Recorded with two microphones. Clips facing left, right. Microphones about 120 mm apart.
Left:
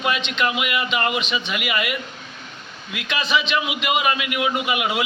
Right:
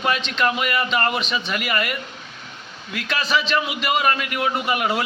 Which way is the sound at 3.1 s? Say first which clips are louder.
Even; 40° right (ahead or behind).